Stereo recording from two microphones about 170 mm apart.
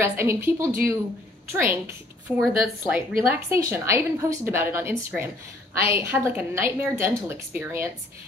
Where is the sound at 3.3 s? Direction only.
15° right (ahead or behind).